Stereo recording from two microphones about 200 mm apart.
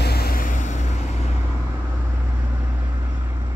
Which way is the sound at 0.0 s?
50° left (ahead or behind).